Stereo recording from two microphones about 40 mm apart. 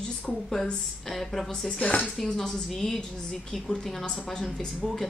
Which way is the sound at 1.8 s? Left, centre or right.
Left.